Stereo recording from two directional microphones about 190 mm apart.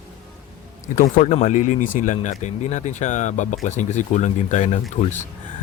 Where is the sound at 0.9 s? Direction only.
45° left (ahead or behind).